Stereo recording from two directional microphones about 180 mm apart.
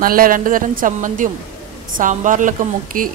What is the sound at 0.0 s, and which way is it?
A woman's voice, 50° right (ahead or behind).